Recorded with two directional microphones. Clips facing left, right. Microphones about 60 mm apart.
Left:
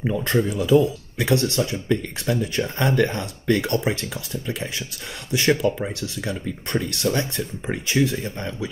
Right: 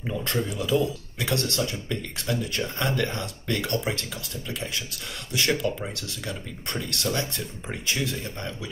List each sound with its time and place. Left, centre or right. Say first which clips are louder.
0.0 s speech: left 7 dB; left